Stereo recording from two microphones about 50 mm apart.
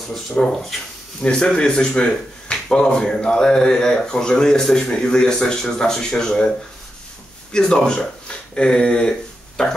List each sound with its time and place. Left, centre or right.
0.4 s speech: left
7.5 s speech: centre